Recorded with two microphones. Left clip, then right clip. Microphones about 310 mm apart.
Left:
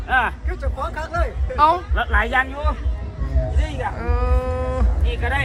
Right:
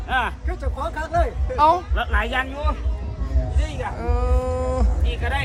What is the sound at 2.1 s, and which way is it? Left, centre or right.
Speech, centre.